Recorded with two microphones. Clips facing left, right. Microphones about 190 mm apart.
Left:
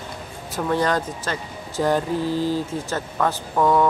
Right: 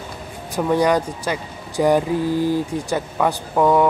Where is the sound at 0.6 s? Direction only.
10° right (ahead or behind).